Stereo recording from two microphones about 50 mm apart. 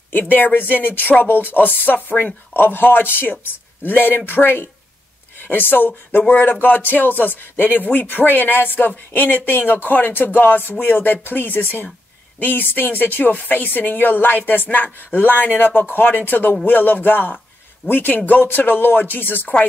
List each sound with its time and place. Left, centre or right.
0.1 s speech: left